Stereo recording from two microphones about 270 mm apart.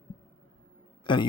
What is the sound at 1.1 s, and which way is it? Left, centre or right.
Speech, centre.